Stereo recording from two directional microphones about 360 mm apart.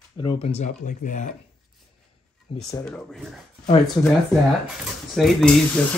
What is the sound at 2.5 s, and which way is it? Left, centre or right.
Speech, centre.